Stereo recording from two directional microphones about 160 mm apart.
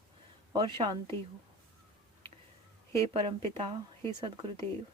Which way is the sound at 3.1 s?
35° right (ahead or behind).